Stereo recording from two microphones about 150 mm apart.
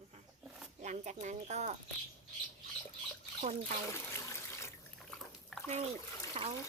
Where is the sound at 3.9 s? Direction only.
20° left (ahead or behind).